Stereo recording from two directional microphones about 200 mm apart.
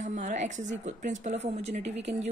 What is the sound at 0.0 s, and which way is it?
A woman's voice, 35° right (ahead or behind).